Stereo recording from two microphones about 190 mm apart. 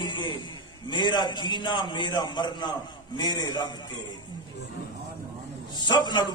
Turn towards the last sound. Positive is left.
turn(degrees=20)  # may be behind; listen again after turning